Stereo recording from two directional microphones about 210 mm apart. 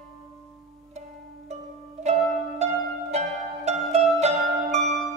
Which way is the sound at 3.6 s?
30° right (ahead or behind).